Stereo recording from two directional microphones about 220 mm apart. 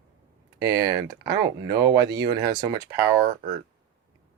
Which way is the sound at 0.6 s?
15° right (ahead or behind).